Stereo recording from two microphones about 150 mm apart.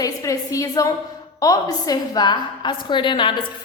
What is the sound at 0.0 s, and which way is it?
A woman's voice, 20° left (ahead or behind).